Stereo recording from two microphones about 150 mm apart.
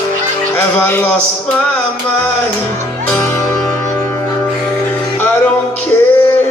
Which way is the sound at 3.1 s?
15° left (ahead or behind).